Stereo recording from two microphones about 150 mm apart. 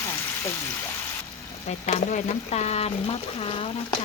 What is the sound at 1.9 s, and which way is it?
Speech, 55° left (ahead or behind).